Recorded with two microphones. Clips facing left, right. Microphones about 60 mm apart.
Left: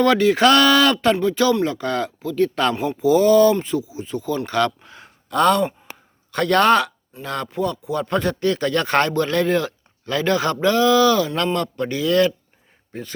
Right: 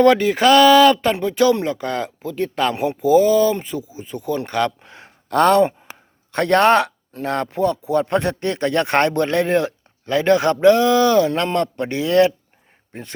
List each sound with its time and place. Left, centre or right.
0.2 s speech: centre
4.8 s a sound: right
5.3 s sigh: right
6.3 s speech: right